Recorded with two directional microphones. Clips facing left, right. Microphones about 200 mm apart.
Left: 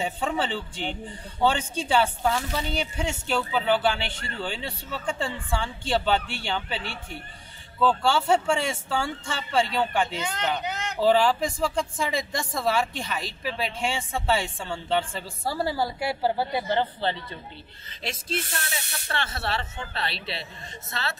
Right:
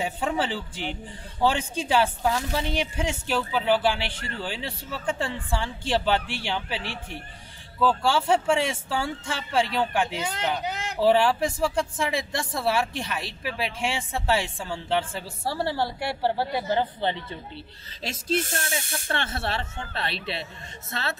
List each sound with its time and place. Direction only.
0.0 s a woman's voice: 5° right (ahead or behind)
7.8 s a woman's voice: 5° right (ahead or behind)
17.0 s a woman's voice: 20° right (ahead or behind)
18.0 s speech: 45° right (ahead or behind)